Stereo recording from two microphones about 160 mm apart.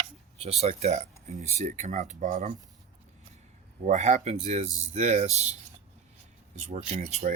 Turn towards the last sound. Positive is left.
turn(degrees=-45)  # may be behind; listen again after turning